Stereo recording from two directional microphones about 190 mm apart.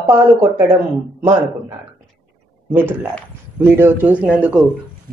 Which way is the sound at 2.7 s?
10° right (ahead or behind).